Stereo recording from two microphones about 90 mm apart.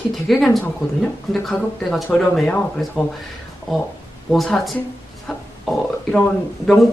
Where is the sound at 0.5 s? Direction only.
5° left (ahead or behind).